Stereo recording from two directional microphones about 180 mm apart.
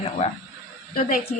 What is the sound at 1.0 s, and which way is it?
Speech, 50° left (ahead or behind).